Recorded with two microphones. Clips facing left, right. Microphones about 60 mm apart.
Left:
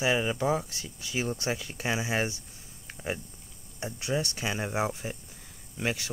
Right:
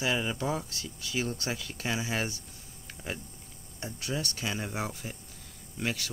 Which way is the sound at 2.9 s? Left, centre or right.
Centre.